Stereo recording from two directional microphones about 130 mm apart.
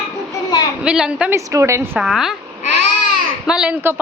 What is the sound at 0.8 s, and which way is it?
Speech, 5° right (ahead or behind).